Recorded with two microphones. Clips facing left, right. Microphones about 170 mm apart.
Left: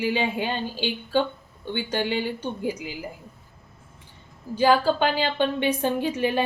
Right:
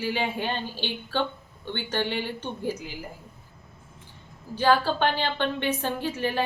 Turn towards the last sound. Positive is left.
turn(degrees=15)  # may be behind; listen again after turning